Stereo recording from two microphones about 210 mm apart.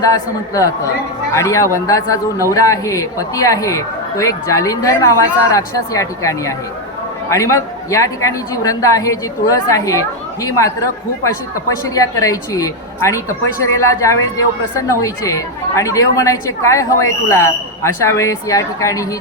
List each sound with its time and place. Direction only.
0.0 s speech: 15° left (ahead or behind)
11.9 s speech: 15° left (ahead or behind)